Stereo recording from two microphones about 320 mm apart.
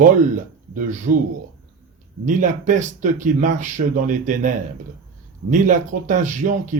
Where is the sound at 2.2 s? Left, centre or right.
Right.